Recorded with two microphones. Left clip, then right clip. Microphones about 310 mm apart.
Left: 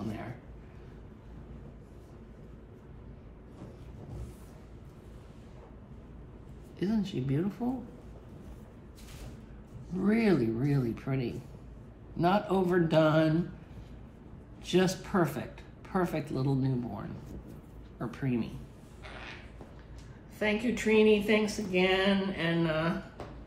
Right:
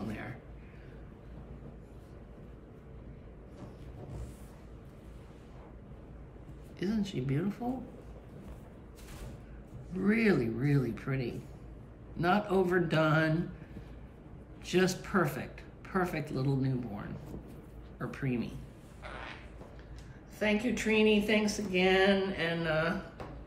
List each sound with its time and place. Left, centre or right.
6.8 s speech: centre
9.8 s speech: centre
14.6 s speech: centre
20.3 s speech: left